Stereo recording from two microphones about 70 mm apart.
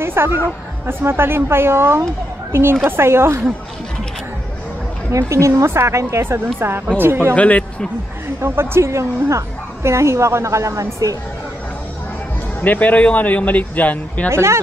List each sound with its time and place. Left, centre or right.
0.0 s speech: right
5.1 s speech: right
7.3 s a man's voice: centre
8.4 s speech: right
12.6 s a man's voice: left
14.3 s speech: right